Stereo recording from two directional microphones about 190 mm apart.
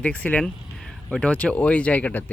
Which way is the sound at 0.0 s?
5° left (ahead or behind).